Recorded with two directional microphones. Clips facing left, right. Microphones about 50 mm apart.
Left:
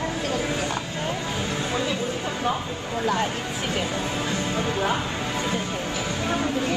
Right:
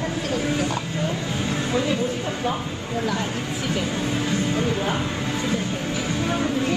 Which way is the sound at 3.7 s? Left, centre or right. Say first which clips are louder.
Right 2 dB; left.